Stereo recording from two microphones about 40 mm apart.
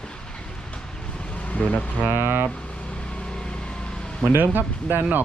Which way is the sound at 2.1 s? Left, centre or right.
Right.